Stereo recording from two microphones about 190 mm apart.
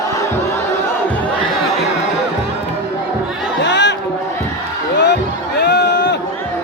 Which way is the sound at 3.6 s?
70° left (ahead or behind).